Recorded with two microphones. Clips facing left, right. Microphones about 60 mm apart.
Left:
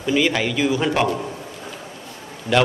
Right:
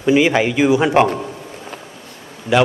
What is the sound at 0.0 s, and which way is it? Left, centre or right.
A man's voice, right.